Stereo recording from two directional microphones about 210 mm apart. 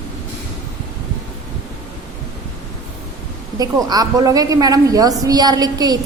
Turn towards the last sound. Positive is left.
turn(degrees=-20)  # may be behind; listen again after turning